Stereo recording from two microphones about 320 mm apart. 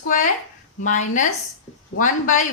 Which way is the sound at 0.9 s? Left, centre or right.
Left.